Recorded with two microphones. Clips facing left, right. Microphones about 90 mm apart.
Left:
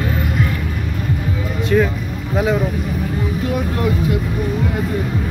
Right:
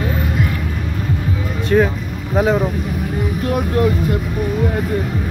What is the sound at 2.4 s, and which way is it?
Speech, 40° right (ahead or behind).